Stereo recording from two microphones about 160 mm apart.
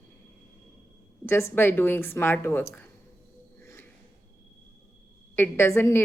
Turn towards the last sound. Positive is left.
turn(degrees=15)  # may be behind; listen again after turning